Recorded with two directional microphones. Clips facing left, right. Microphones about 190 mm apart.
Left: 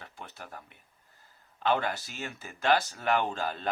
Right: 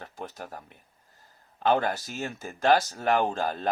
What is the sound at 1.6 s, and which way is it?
Speech, 40° right (ahead or behind).